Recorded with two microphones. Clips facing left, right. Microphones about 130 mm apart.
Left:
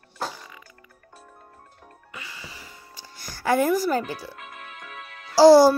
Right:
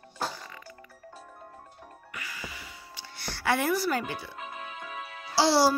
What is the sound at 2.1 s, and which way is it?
Music, 25° left (ahead or behind).